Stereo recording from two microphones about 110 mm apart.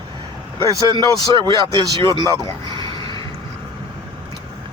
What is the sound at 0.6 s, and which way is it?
Speech, 35° right (ahead or behind).